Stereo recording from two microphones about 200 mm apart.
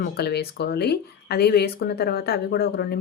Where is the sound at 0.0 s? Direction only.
55° left (ahead or behind).